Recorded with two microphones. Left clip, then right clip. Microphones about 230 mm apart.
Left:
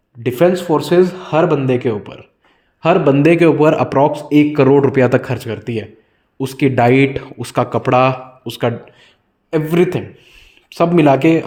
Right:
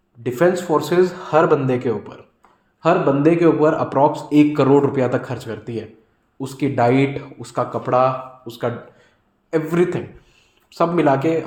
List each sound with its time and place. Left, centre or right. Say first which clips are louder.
0.2 s speech: left 4 dB; left